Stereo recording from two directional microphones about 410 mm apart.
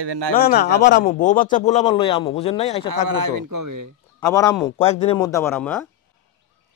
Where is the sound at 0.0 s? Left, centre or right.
Right.